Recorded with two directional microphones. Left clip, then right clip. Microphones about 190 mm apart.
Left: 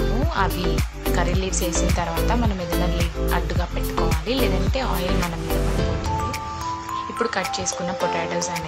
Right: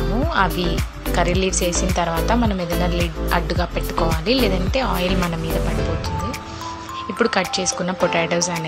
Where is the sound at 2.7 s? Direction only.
Centre (ahead or behind).